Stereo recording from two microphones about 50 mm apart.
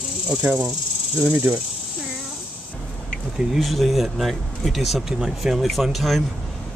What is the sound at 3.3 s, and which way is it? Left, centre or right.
Speech, centre.